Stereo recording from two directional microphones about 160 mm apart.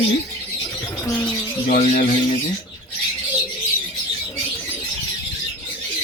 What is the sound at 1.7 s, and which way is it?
Speech, 45° left (ahead or behind).